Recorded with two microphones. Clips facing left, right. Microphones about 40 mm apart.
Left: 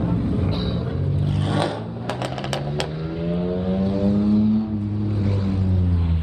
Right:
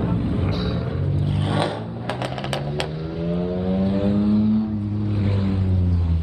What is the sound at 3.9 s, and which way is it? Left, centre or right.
Vehicle, right.